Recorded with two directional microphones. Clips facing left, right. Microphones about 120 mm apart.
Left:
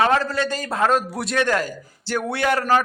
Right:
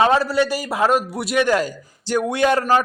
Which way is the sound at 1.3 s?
15° right (ahead or behind).